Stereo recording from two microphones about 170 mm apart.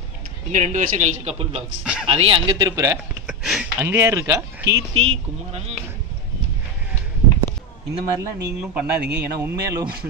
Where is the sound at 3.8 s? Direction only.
15° right (ahead or behind).